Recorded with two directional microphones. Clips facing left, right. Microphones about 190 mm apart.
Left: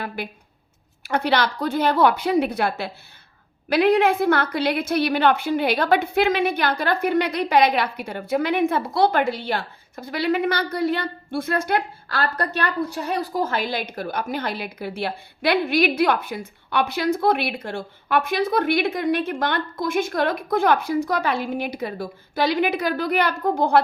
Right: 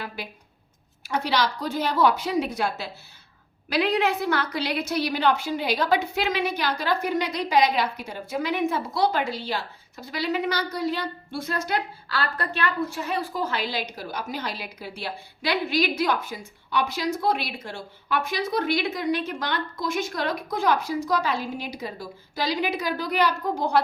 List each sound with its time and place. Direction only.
1.0 s a woman's voice: 60° left (ahead or behind)